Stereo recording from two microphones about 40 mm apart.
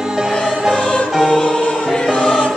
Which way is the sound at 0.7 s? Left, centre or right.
Left.